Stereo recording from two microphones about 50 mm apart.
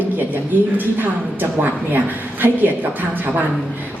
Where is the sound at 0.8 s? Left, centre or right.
Right.